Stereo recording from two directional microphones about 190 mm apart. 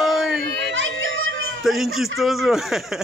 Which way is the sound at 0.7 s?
90° right.